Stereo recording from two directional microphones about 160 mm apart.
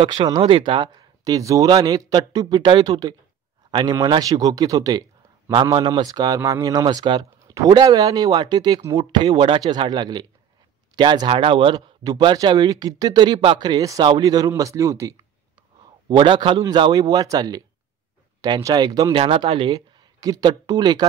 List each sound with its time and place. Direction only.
0.0 s speech: 30° right (ahead or behind)
16.1 s speech: 30° right (ahead or behind)